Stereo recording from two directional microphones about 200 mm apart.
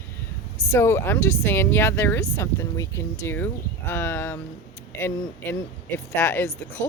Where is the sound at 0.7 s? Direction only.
10° left (ahead or behind).